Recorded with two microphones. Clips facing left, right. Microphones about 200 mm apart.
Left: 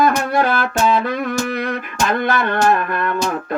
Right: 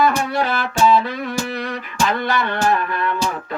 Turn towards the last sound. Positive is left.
turn(degrees=50)  # may be behind; listen again after turning